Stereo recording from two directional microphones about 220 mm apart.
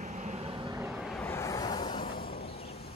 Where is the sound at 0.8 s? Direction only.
Centre (ahead or behind).